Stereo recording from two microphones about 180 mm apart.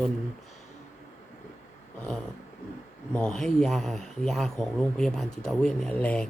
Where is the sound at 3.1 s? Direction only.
5° left (ahead or behind).